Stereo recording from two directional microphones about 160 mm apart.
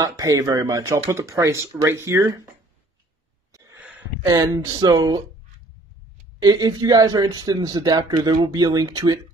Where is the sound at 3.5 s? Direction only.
20° right (ahead or behind).